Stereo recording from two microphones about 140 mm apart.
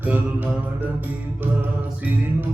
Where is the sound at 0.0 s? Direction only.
10° right (ahead or behind).